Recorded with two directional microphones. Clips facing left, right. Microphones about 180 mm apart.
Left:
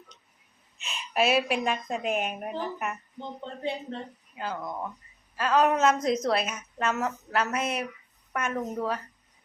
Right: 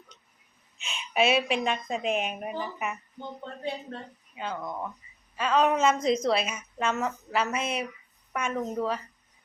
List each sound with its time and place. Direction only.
0.8 s a woman's voice: centre (ahead or behind)
3.2 s speech: 25° left (ahead or behind)
4.4 s a woman's voice: centre (ahead or behind)